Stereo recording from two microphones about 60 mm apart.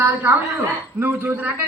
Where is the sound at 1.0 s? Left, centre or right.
Right.